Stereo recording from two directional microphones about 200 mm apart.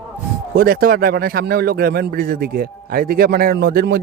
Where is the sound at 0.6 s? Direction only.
45° right (ahead or behind).